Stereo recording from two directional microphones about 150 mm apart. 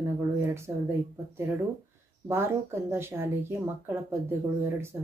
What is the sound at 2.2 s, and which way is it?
Speech, 15° right (ahead or behind).